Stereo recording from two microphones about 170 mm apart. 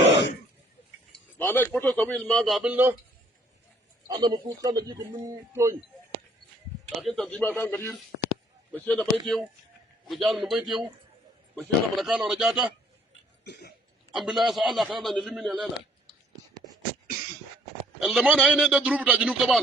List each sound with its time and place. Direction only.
1.4 s a man's voice: 10° left (ahead or behind); by 2.9 s 10° right (ahead or behind)
4.1 s speech: 25° right (ahead or behind)
7.0 s a man's voice: centre (ahead or behind)
13.4 s cough: 75° left (ahead or behind)
14.1 s a man's voice: centre (ahead or behind)
18.0 s a man's voice: centre (ahead or behind)